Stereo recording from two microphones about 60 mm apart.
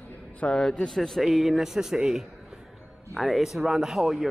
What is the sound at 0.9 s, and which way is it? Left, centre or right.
A man's voice, centre.